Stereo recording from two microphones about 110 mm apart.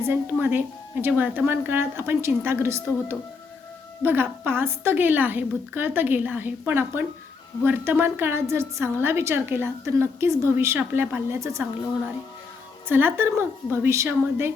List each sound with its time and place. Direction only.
0.0 s a woman's voice: 20° right (ahead or behind)
12.9 s a woman's voice: 20° right (ahead or behind)